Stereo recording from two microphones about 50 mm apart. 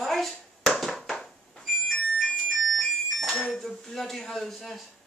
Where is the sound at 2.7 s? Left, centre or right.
Centre.